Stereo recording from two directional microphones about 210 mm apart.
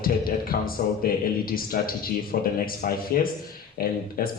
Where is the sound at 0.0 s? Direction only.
45° left (ahead or behind).